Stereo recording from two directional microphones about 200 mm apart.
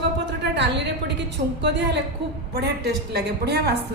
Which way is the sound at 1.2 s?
60° right (ahead or behind).